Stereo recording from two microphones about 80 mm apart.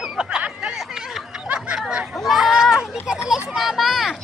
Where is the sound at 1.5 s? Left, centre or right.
Centre.